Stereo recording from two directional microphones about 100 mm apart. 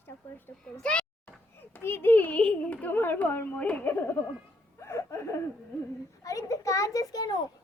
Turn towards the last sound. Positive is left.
turn(degrees=40)  # may be behind; listen again after turning